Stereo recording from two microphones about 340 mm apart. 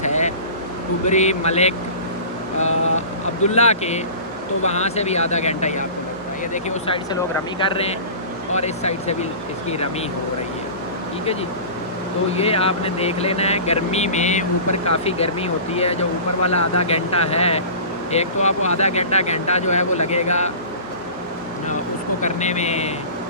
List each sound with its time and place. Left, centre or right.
0.0 s vehicle: left
1.0 s speech: centre
12.3 s speech: centre
16.4 s speech: left
16.8 s speech: centre
22.2 s speech: centre